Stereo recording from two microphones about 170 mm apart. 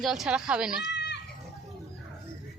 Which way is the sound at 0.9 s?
90° left.